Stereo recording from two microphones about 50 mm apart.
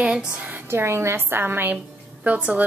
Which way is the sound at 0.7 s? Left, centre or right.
Right.